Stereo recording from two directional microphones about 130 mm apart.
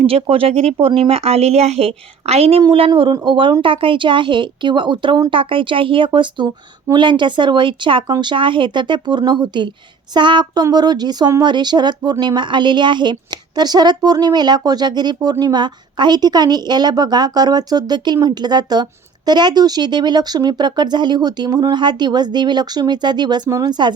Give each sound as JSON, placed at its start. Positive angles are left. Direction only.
{"t": 0.0, "sound": "a woman's voice", "side_deg": -45}